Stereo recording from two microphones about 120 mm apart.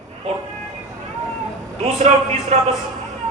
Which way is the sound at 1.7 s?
65° right (ahead or behind).